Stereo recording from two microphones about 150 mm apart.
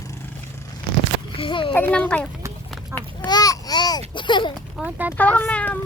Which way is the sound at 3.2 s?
25° left (ahead or behind).